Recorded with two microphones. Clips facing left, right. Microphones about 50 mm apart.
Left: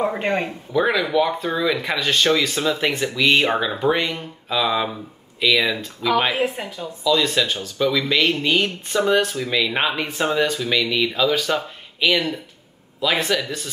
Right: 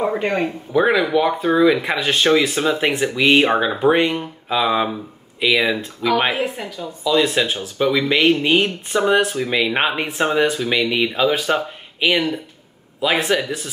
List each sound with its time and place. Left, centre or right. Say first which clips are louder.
0.0 s speech: right 2 dB; centre
0.7 s speech: right 2 dB; right
6.3 s speech: left 1 dB; centre
7.1 s speech: right 2 dB; right